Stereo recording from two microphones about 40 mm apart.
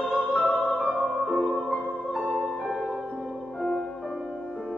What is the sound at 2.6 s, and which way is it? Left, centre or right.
Music, centre.